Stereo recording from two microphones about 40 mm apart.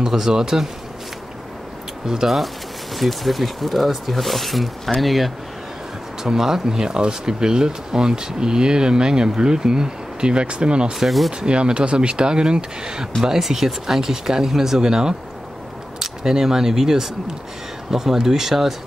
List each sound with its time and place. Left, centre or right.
0.0 s speech: centre
2.0 s speech: centre; by 10.9 s right
11.0 s speech: centre
11.3 s speech: right; by 18.8 s centre